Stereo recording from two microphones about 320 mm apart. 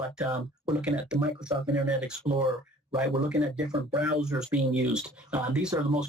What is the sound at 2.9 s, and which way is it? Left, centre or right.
Speech, centre.